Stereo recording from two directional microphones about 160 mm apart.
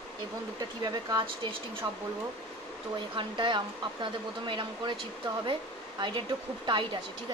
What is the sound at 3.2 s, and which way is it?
Speech, 30° right (ahead or behind).